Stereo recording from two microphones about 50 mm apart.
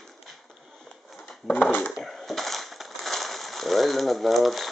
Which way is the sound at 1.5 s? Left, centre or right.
Left.